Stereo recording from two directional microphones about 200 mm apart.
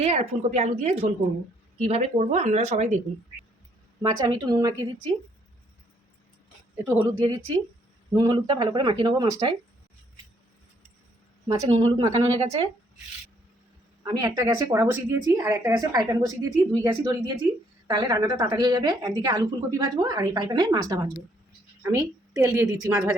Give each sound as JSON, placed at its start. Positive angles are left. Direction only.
{"t": 0.0, "sound": "speech", "side_deg": -35}
{"t": 4.0, "sound": "speech", "side_deg": -15}
{"t": 6.8, "sound": "a woman's voice", "side_deg": -20}
{"t": 11.4, "sound": "speech", "side_deg": -15}
{"t": 14.0, "sound": "a woman's voice", "side_deg": -15}